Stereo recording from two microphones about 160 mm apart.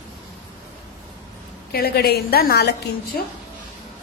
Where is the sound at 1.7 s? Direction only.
75° left (ahead or behind).